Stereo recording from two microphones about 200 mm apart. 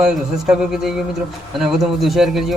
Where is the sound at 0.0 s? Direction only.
5° right (ahead or behind).